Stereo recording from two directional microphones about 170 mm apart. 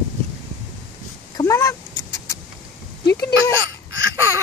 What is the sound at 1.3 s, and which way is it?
Vehicle, 20° left (ahead or behind).